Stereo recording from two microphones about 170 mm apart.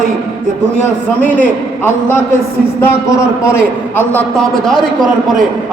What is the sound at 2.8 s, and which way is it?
Speech, 15° left (ahead or behind).